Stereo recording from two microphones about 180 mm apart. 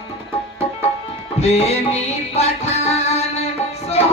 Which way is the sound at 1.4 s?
35° left (ahead or behind).